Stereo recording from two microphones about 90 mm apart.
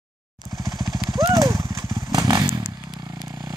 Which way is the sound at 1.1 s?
40° right (ahead or behind).